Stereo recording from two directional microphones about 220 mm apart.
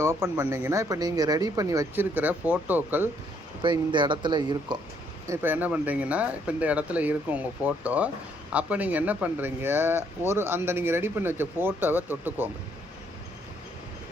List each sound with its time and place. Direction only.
0.0 s speech: 10° right (ahead or behind)
3.6 s speech: 20° right (ahead or behind)
5.3 s speech: 10° right (ahead or behind)